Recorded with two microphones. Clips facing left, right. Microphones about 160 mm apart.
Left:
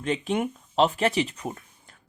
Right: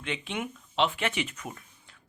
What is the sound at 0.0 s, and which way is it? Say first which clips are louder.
Speech: left 8 dB; 40° left (ahead or behind).